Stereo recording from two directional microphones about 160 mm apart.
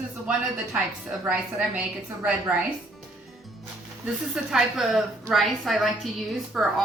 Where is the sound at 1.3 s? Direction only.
10° right (ahead or behind).